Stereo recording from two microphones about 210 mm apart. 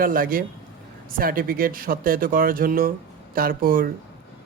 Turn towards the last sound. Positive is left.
turn(degrees=-45)  # may be behind; listen again after turning